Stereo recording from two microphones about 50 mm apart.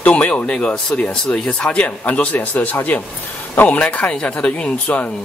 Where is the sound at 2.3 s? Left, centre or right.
Left; by 4.7 s centre.